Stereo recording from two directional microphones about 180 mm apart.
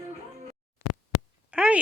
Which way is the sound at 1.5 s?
5° right (ahead or behind).